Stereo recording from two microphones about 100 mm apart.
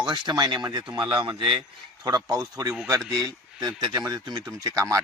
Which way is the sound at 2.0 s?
40° right (ahead or behind).